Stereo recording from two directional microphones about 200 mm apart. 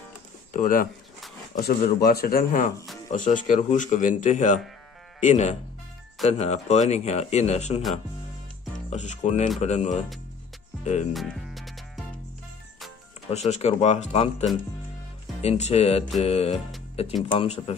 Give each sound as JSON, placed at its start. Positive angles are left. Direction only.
{"t": 0.5, "sound": "speech", "side_deg": 45}
{"t": 10.8, "sound": "music", "side_deg": 35}
{"t": 11.1, "sound": "music", "side_deg": 0}
{"t": 13.5, "sound": "speech", "side_deg": 35}
{"t": 15.4, "sound": "speech", "side_deg": 30}